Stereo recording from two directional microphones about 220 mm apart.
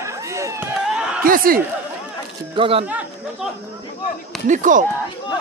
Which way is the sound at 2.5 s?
25° right (ahead or behind).